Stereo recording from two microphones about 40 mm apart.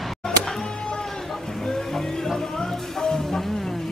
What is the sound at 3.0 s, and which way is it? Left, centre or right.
Music, centre.